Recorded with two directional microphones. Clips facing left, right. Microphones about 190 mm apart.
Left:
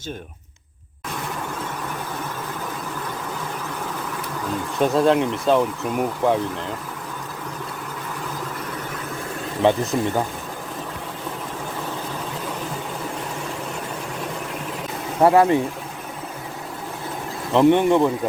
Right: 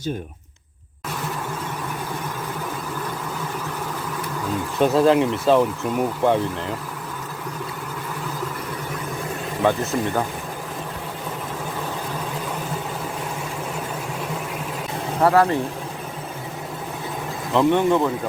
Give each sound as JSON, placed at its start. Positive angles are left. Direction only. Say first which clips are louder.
{"t": 4.8, "sound": "speech", "louder": "right 1 dB", "side_deg": 0}
{"t": 9.6, "sound": "speech", "louder": "left 2 dB", "side_deg": 15}
{"t": 15.2, "sound": "speech", "louder": "left 2 dB", "side_deg": 20}
{"t": 17.5, "sound": "speech", "louder": "left 2 dB", "side_deg": 20}